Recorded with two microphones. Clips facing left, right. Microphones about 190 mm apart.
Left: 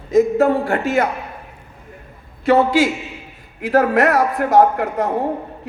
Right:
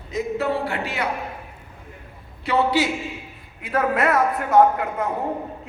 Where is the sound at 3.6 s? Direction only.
85° left.